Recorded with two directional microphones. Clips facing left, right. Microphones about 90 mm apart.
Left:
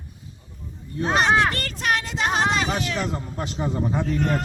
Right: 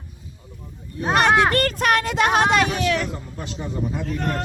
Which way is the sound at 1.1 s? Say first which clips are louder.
Right 3 dB; 55° right (ahead or behind).